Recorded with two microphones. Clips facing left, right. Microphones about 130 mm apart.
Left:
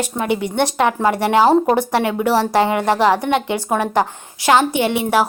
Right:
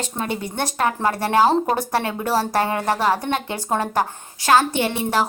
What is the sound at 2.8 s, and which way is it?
Speech, 85° left.